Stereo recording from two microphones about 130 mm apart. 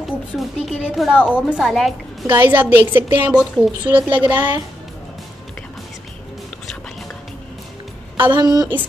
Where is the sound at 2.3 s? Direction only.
15° right (ahead or behind).